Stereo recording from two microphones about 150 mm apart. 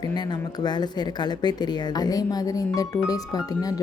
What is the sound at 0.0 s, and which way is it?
Speech, 30° left (ahead or behind).